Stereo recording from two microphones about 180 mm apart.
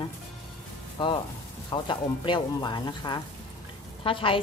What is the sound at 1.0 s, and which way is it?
A woman's voice, 25° left (ahead or behind).